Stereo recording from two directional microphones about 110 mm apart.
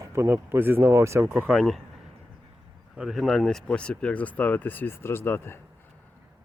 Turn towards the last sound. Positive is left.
turn(degrees=20)  # may be behind; listen again after turning